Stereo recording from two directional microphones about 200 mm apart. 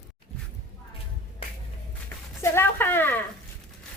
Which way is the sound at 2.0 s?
10° left (ahead or behind).